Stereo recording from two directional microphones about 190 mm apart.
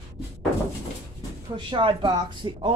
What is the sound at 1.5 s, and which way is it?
Speech, 25° right (ahead or behind).